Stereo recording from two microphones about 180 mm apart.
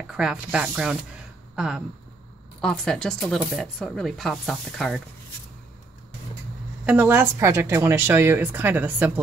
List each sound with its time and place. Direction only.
0.1 s speech: 5° right (ahead or behind)
6.9 s a woman's voice: 10° right (ahead or behind)